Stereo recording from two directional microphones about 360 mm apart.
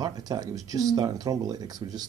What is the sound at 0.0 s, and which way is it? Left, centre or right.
Speech, centre.